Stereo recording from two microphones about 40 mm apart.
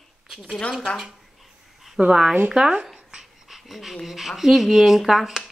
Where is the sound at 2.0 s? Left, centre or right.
Centre.